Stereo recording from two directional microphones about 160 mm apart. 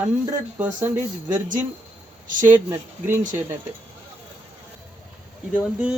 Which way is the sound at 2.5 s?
15° right (ahead or behind).